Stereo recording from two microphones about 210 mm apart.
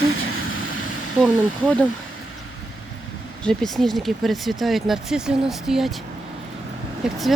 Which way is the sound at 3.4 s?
Centre (ahead or behind).